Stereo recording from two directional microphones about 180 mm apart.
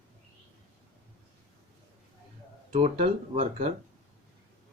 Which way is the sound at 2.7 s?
35° right (ahead or behind).